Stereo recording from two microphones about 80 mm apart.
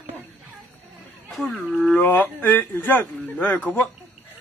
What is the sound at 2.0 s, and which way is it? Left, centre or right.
A man's voice, left.